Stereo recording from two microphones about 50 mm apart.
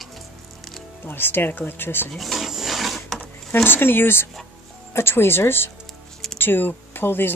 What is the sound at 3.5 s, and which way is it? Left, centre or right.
Speech, left.